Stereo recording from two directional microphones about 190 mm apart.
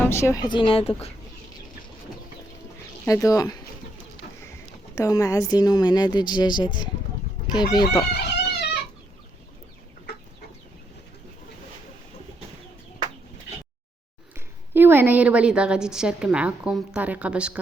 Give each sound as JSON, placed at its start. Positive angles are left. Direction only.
{"t": 0.0, "sound": "a woman's voice", "side_deg": 15}
{"t": 3.1, "sound": "speech", "side_deg": 15}
{"t": 4.9, "sound": "a woman's voice", "side_deg": 15}
{"t": 8.1, "sound": "a sound", "side_deg": 60}
{"t": 14.3, "sound": "a woman's voice", "side_deg": -10}